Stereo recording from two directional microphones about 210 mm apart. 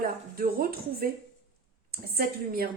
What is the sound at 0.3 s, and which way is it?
Speech, 45° right (ahead or behind).